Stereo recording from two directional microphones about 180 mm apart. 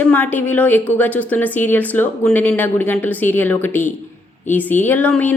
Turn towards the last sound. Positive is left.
turn(degrees=10)  # may be behind; listen again after turning